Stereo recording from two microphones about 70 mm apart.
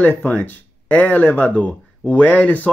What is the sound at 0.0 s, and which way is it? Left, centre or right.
Speech, left.